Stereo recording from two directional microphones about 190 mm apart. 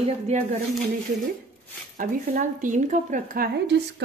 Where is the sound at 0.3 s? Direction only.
35° right (ahead or behind).